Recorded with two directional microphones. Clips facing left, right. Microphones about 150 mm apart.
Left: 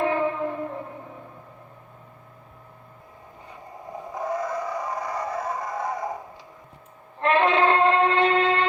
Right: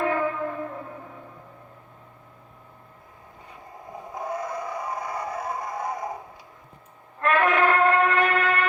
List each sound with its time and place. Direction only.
0.0 s music: 25° left (ahead or behind)
3.9 s vehicle: 10° right (ahead or behind)
7.2 s a sound: 25° left (ahead or behind)